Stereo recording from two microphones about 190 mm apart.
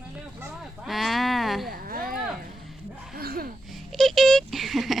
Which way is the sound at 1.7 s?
50° right (ahead or behind).